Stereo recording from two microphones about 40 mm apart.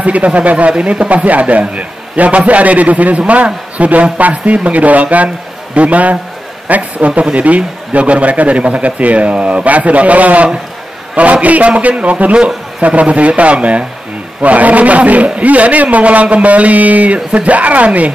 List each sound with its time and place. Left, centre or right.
0.0 s a man's voice: right
7.1 s a man's voice: right